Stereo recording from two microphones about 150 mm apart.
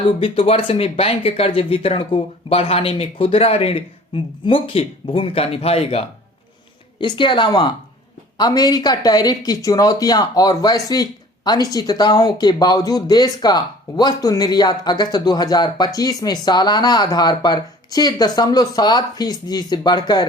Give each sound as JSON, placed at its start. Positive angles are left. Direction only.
{"t": 0.2, "sound": "speech", "side_deg": 35}